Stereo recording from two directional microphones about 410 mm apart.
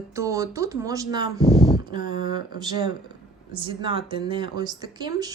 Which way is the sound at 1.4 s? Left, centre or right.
Centre.